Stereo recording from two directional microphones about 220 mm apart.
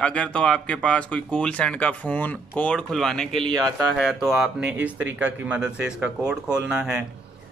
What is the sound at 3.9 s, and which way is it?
Speech, centre (ahead or behind).